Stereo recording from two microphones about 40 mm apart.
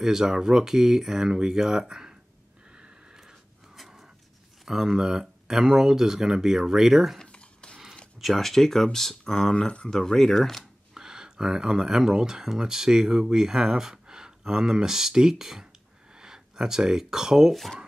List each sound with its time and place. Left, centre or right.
0.0 s speech: centre
2.7 s a sound: right
4.6 s speech: centre
7.2 s a sound: left
8.2 s speech: centre; by 9.8 s left
9.8 s speech: centre
11.0 s speech: centre